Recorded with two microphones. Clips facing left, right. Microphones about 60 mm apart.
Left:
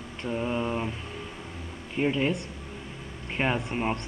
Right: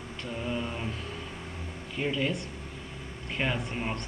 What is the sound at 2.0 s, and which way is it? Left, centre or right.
Mantra, left.